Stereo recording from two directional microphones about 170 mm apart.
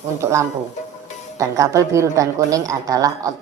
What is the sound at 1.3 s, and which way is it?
A woman's voice, 20° right (ahead or behind).